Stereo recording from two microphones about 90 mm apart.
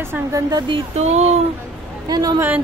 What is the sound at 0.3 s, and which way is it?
Speech, 45° right (ahead or behind).